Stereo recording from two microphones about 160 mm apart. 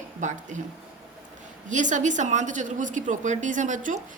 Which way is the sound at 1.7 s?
50° right (ahead or behind).